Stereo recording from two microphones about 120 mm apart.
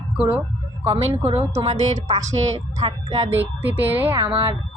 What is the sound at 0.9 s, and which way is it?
Speech, 60° right (ahead or behind).